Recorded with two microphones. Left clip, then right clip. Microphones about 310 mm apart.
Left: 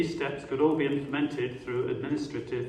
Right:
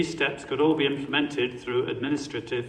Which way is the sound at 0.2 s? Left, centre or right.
Right.